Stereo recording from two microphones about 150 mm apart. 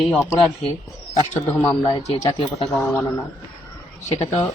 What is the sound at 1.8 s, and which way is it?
Speech, 30° left (ahead or behind).